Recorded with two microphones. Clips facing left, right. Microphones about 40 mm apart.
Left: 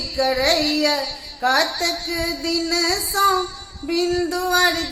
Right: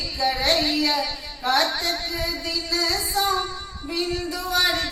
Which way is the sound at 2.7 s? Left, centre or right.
Left.